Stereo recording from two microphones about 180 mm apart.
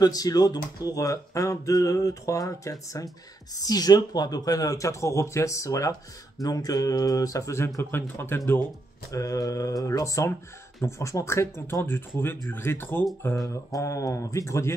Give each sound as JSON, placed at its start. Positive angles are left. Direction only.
{"t": 0.0, "sound": "speech", "side_deg": 20}